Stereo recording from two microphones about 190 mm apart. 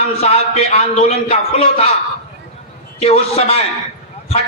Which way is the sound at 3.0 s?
30° left (ahead or behind).